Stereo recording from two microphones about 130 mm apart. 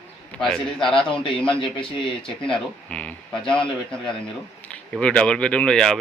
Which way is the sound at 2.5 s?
10° left (ahead or behind).